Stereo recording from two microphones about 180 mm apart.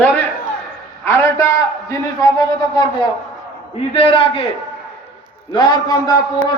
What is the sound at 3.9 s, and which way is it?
Speech, 30° left (ahead or behind).